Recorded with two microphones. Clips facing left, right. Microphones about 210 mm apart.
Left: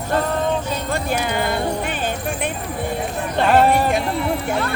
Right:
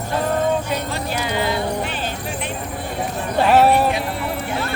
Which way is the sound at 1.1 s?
55° left (ahead or behind).